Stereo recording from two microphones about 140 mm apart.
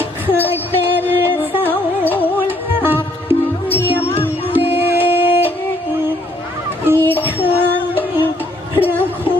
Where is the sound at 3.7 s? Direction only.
15° left (ahead or behind).